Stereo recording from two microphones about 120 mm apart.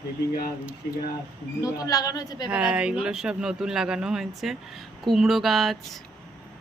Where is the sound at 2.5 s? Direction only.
10° right (ahead or behind).